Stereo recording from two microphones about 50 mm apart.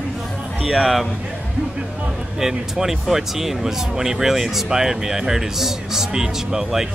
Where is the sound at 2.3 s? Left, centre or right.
Centre.